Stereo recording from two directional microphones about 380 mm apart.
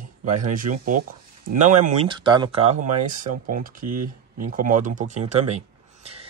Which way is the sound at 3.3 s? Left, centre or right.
Right.